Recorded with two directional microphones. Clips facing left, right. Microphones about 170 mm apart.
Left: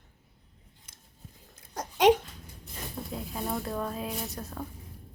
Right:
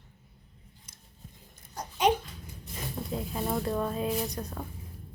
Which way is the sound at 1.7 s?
90° left.